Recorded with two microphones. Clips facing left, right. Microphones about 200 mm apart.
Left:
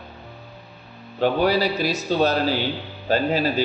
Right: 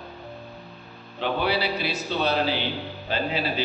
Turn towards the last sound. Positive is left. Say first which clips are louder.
# left 6 dB
turn(degrees=45)  # may be behind; listen again after turning